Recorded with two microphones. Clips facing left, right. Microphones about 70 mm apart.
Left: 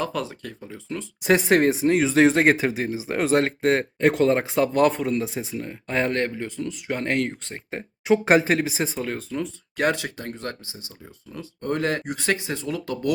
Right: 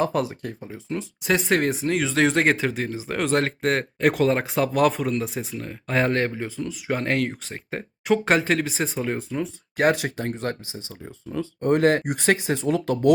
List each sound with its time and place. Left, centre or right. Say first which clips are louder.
0.0 s speech: right 4 dB; right
1.2 s speech: left 4 dB; centre
2.0 s speech: left 3 dB; centre
2.2 s speech: even; centre
3.9 s speech: right 1 dB; centre
9.0 s speech: right 2 dB; centre
9.8 s speech: right 3 dB; right
11.7 s speech: right 6 dB; right
12.7 s speech: right 5 dB; right